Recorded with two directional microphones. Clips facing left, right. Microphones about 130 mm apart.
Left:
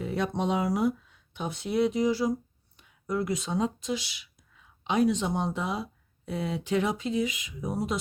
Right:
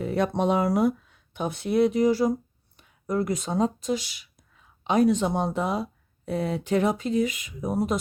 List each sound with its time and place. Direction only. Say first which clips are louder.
0.0 s speech: right 5 dB; 50° right (ahead or behind)